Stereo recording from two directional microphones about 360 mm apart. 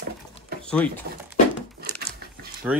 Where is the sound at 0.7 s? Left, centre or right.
Centre.